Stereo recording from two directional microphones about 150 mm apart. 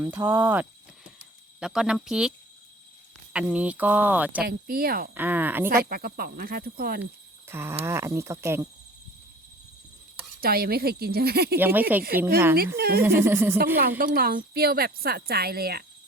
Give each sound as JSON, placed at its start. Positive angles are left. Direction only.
{"t": 0.0, "sound": "speech", "side_deg": -15}
{"t": 3.3, "sound": "speech", "side_deg": -10}
{"t": 4.4, "sound": "speech", "side_deg": -85}
{"t": 5.1, "sound": "speech", "side_deg": -10}
{"t": 5.6, "sound": "speech", "side_deg": -85}
{"t": 7.0, "sound": "speech", "side_deg": -15}
{"t": 10.4, "sound": "speech", "side_deg": -90}
{"t": 11.6, "sound": "speech", "side_deg": -10}
{"t": 12.7, "sound": "speech", "side_deg": -90}
{"t": 13.0, "sound": "speech", "side_deg": -15}
{"t": 14.0, "sound": "speech", "side_deg": -80}